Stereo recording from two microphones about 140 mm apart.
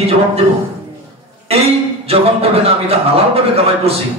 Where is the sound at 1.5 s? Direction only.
45° right (ahead or behind).